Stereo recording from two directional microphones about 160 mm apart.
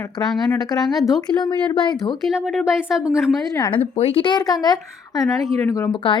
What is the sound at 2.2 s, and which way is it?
Speech, 5° right (ahead or behind).